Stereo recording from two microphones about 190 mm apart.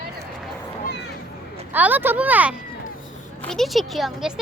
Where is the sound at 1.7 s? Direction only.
10° right (ahead or behind).